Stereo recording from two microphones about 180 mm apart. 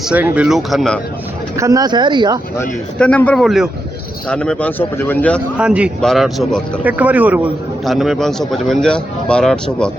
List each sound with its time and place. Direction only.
0.0 s speech: 10° right (ahead or behind)
1.5 s speech: 20° right (ahead or behind)
2.6 s speech: 10° left (ahead or behind)
5.5 s speech: 5° right (ahead or behind)